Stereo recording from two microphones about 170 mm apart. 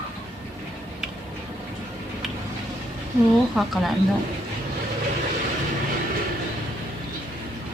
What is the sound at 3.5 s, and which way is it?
Speech, centre (ahead or behind).